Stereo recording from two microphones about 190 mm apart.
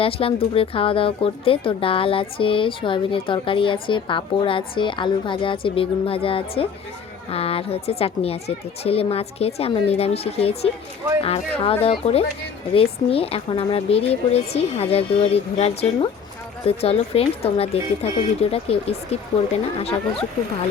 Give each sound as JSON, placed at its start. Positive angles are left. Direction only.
{"t": 0.0, "sound": "a woman's voice", "side_deg": 30}